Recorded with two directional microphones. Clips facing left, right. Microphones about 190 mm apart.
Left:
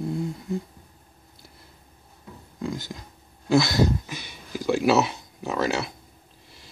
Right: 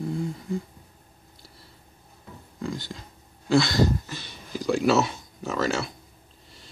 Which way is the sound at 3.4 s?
10° left (ahead or behind).